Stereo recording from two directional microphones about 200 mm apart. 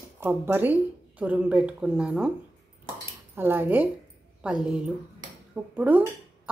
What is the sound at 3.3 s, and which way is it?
A woman's voice, 10° right (ahead or behind).